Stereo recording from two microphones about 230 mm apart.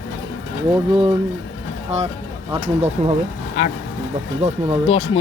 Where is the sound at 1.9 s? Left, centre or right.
Right.